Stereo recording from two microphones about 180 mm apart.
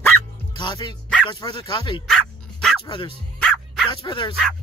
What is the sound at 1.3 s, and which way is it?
Speech, 25° left (ahead or behind).